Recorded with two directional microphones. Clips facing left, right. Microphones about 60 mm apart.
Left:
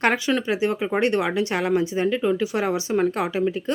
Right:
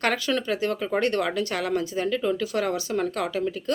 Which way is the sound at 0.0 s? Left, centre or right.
Left.